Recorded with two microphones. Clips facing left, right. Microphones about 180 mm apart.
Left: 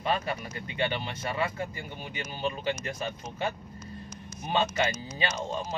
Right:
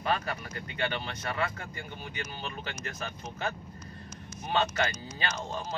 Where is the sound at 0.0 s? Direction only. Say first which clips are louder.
Left 2 dB; 20° left (ahead or behind).